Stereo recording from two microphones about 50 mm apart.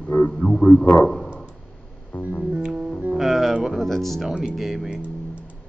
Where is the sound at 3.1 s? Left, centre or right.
Centre.